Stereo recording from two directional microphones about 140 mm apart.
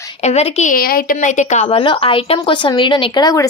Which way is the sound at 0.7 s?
90° left.